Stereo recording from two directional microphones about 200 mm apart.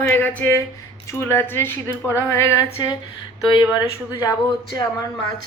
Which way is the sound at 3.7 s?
15° left (ahead or behind).